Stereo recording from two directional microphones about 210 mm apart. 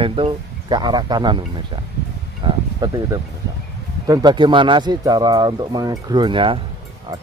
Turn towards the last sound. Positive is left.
turn(degrees=-25)  # may be behind; listen again after turning